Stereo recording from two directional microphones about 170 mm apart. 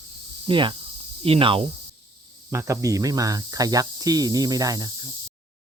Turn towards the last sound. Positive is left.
turn(degrees=-20)  # may be behind; listen again after turning